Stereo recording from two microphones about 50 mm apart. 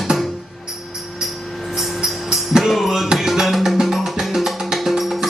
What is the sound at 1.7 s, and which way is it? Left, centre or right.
Tambourine, centre.